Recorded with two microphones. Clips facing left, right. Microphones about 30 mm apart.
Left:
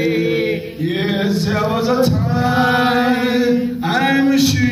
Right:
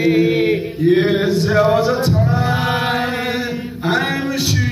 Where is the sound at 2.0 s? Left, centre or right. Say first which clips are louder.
Left 2 dB; left.